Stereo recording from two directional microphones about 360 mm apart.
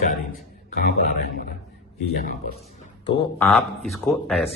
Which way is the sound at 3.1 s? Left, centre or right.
Centre.